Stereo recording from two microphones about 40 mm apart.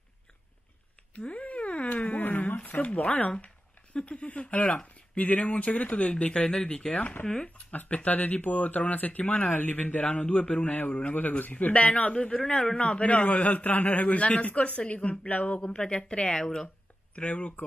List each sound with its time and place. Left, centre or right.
1.1 s a sound: left
2.1 s a sound: left
2.9 s speech: left
11.1 s a man's voice: left
11.6 s speech: left
12.1 s a woman's voice: left
12.8 s speech: left
15.6 s a woman's voice: left
17.1 s speech: left